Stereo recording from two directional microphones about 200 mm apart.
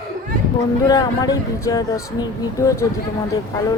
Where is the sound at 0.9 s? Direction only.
20° left (ahead or behind).